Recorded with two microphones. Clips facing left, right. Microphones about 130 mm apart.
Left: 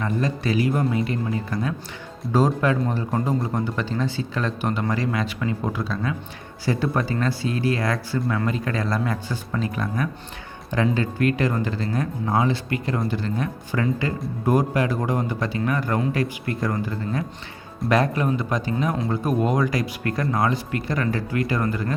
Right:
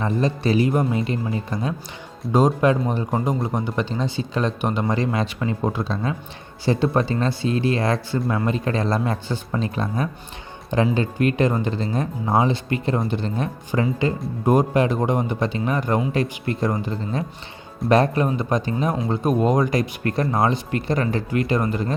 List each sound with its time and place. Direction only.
0.0 s speech: 25° right (ahead or behind)